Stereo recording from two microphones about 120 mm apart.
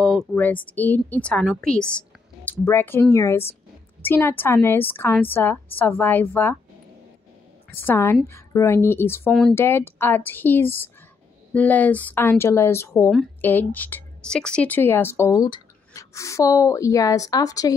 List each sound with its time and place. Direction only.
0.0 s a sound: 5° left (ahead or behind)
0.4 s a woman's voice: 15° left (ahead or behind)
7.7 s speech: 20° left (ahead or behind)
9.3 s speech: centre (ahead or behind)
9.6 s a woman's voice: 20° left (ahead or behind)